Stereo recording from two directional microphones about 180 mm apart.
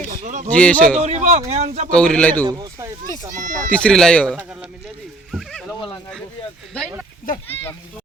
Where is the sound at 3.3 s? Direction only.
45° right (ahead or behind).